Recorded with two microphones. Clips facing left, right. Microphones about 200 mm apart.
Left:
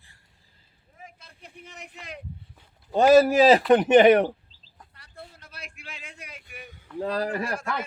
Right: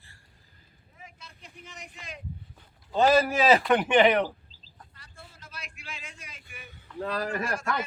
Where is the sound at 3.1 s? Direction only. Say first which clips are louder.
Left 8 dB; 40° left (ahead or behind).